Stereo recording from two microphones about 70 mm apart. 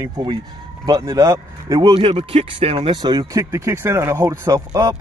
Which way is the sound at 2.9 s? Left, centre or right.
Right.